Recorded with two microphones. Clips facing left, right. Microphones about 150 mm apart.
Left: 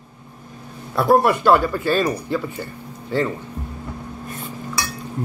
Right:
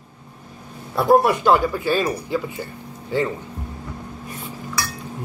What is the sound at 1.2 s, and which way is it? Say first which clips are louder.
Speech: left 1 dB; 15° right (ahead or behind).